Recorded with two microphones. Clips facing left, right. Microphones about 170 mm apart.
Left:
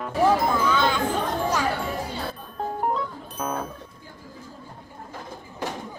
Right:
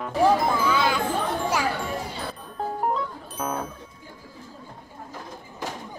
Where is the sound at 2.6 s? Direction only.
Centre (ahead or behind).